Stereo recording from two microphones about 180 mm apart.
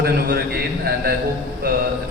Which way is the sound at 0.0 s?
60° right (ahead or behind).